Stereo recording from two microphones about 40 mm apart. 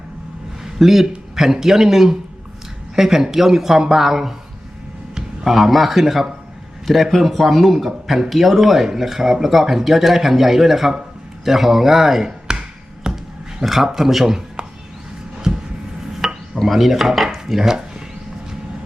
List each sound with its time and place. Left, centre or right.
0.6 s speech: centre
5.5 s speech: centre
12.5 s tap: centre
13.1 s a sound: centre
13.6 s speech: centre
16.2 s dishes: centre